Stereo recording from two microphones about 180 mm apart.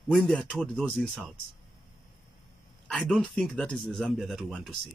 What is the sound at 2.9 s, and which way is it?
Speech, 5° left (ahead or behind).